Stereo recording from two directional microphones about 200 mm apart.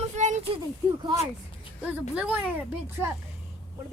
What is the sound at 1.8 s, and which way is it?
Speech, 5° right (ahead or behind).